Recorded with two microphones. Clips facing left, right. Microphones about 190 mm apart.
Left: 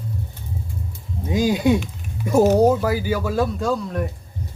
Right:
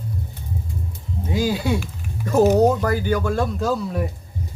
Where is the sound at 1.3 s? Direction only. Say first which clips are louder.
Left 4 dB; 20° left (ahead or behind).